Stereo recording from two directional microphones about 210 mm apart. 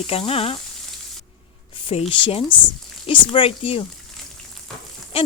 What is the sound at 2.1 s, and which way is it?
Sizzle, 25° left (ahead or behind).